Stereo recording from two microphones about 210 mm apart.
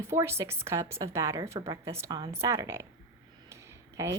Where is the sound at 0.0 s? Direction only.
10° right (ahead or behind).